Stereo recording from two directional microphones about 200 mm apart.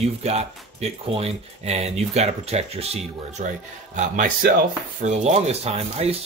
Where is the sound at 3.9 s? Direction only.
40° right (ahead or behind).